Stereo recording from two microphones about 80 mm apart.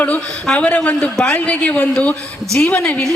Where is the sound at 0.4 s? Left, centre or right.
Centre.